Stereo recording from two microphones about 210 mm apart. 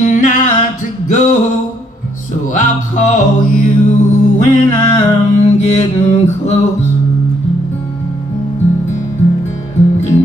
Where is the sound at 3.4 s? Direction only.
35° left (ahead or behind).